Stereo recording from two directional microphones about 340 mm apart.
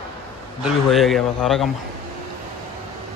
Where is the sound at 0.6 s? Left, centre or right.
Centre.